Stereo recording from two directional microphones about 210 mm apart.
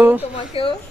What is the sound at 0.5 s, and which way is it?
Speech, 25° left (ahead or behind).